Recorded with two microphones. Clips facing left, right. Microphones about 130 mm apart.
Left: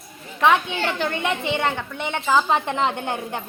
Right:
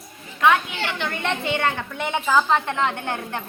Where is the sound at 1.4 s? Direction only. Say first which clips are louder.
Even; 20° left (ahead or behind).